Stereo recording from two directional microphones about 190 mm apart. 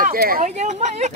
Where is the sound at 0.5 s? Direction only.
35° right (ahead or behind).